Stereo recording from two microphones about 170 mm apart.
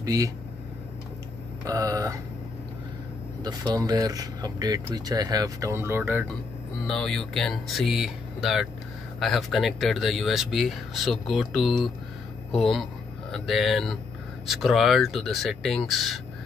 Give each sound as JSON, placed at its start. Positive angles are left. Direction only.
{"t": 0.0, "sound": "speech", "side_deg": -20}
{"t": 1.6, "sound": "speech", "side_deg": -20}
{"t": 3.4, "sound": "speech", "side_deg": -25}
{"t": 6.9, "sound": "speech", "side_deg": 0}